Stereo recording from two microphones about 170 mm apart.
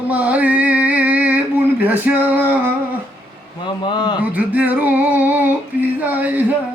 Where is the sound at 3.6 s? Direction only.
25° left (ahead or behind).